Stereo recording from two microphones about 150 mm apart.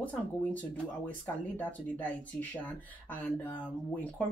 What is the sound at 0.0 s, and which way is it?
Speech, 10° left (ahead or behind).